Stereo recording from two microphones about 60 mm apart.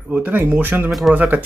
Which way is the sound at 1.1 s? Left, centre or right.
Right.